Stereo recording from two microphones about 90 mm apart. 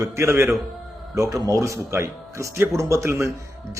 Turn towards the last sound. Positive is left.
turn(degrees=-30)  # may be behind; listen again after turning